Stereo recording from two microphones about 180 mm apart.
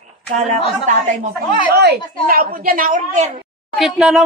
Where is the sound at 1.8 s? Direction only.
60° right (ahead or behind); by 3.3 s 40° right (ahead or behind).